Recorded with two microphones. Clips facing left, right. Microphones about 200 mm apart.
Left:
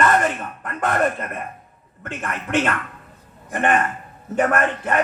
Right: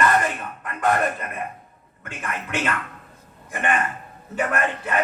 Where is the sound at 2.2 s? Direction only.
50° left (ahead or behind).